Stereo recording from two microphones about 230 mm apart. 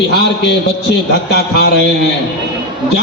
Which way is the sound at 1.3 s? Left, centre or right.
Left.